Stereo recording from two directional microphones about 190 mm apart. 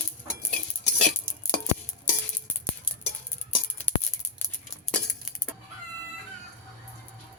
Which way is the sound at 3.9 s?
10° left (ahead or behind).